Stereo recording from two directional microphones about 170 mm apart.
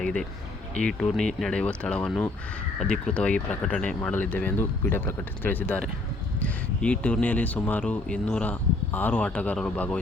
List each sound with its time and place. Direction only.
0.0 s speech: 5° left (ahead or behind)